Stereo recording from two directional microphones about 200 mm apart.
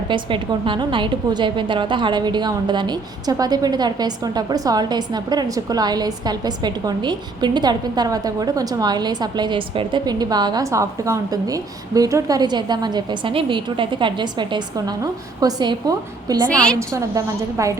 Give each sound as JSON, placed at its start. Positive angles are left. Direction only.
{"t": 0.1, "sound": "a woman's voice", "side_deg": -25}
{"t": 16.5, "sound": "a woman's voice", "side_deg": 5}
{"t": 16.9, "sound": "a woman's voice", "side_deg": -15}